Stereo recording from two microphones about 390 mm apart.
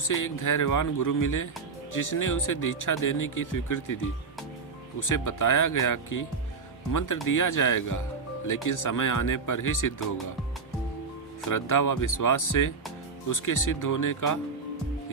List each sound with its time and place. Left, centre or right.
0.1 s speech: left
11.4 s speech: left